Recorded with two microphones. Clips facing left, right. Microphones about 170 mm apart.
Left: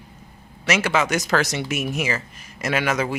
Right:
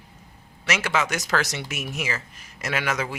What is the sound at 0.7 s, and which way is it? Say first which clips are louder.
Speech: left 4 dB; 25° left (ahead or behind).